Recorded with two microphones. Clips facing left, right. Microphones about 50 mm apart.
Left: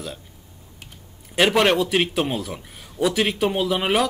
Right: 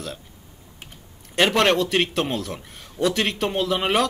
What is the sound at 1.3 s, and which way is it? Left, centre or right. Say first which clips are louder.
Speech: left 1 dB; centre.